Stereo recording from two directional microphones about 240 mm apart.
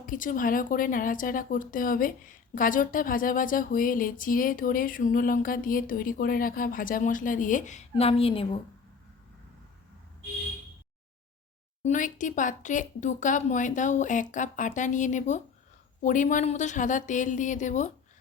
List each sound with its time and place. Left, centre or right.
0.0 s speech: left
11.8 s speech: left